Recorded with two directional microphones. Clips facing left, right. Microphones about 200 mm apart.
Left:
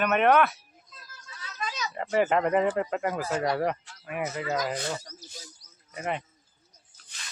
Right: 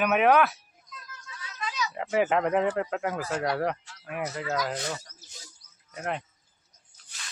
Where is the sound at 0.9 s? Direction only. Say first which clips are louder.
Right 5 dB; 30° left (ahead or behind).